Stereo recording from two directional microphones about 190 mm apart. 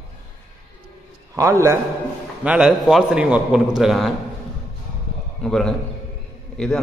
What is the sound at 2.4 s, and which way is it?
A man's voice, 5° right (ahead or behind).